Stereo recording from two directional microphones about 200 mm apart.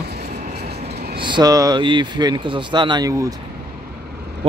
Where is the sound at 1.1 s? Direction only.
25° right (ahead or behind).